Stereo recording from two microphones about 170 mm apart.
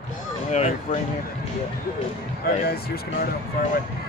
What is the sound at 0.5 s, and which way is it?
Music, 40° left (ahead or behind).